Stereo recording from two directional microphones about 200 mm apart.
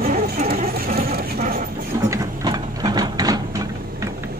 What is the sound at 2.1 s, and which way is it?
Printer, 20° right (ahead or behind).